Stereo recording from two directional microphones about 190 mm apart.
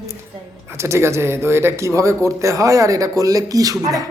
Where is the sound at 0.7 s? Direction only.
15° right (ahead or behind).